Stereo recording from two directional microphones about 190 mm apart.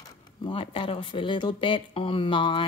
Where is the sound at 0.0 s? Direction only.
25° left (ahead or behind).